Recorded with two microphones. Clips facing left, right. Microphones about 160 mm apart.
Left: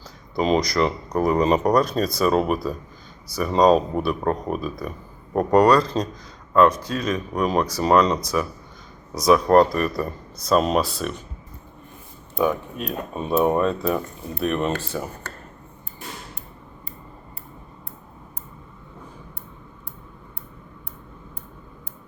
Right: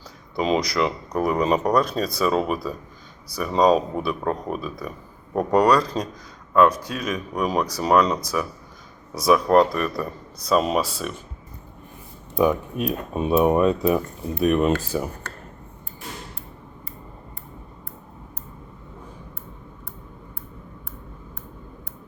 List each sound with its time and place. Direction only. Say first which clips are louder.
0.4 s speech: left 2 dB; 5° right (ahead or behind)
12.4 s speech: right 2 dB; 10° right (ahead or behind)